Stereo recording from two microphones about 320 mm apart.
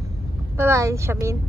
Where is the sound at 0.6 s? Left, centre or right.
Centre.